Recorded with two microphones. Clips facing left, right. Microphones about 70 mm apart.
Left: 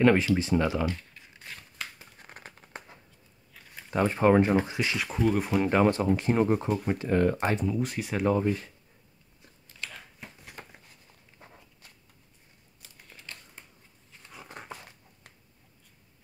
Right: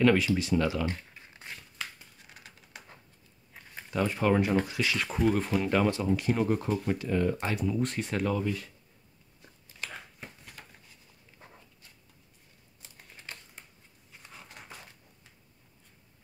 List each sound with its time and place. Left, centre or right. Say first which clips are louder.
0.0 s speech: left 2 dB; left
2.1 s a sound: left 5 dB; left
3.9 s speech: left 4 dB; left
4.5 s speech: left 2 dB; left
4.9 s speech: even; centre
5.6 s speech: left 4 dB; left
7.1 s speech: left 5 dB; left
7.6 s speech: even; centre
8.3 s speech: left 5 dB; left
9.4 s a sound: even; centre
10.6 s a sound: left 6 dB; left
14.6 s a sound: left 8 dB; left